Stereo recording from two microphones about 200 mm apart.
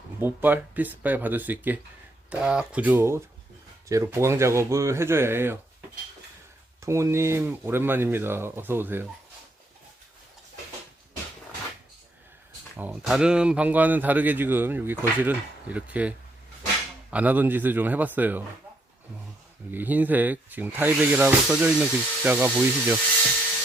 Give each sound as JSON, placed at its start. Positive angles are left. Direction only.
{"t": 0.2, "sound": "speech", "side_deg": -10}
{"t": 6.8, "sound": "speech", "side_deg": -15}
{"t": 12.7, "sound": "speech", "side_deg": -5}
{"t": 19.7, "sound": "speech", "side_deg": -10}